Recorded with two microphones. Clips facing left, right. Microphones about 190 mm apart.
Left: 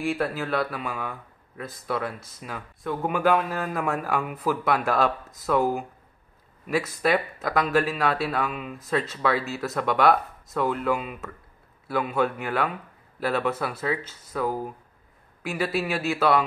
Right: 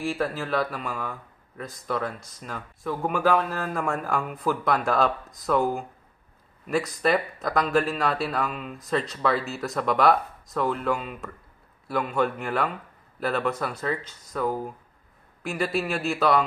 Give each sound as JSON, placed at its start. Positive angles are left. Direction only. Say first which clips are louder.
{"t": 0.0, "sound": "speech", "louder": "left 1 dB", "side_deg": 0}